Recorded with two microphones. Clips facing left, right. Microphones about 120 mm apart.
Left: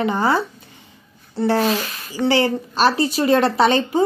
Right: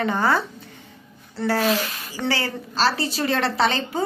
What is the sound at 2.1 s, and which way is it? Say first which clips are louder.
A woman's voice: left 8 dB; 20° left (ahead or behind).